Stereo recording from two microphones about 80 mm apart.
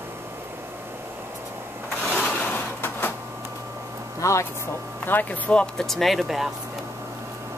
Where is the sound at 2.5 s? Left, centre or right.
Left.